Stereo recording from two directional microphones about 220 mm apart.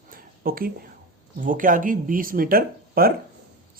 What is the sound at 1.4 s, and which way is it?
Speech, 40° right (ahead or behind).